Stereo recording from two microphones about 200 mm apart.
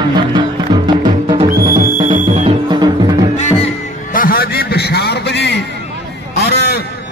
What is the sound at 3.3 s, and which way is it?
Music, 35° left (ahead or behind).